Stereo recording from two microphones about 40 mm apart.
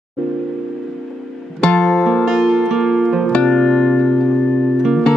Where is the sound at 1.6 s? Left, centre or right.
Left.